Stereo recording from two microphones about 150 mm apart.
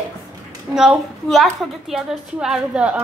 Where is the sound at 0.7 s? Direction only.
5° right (ahead or behind).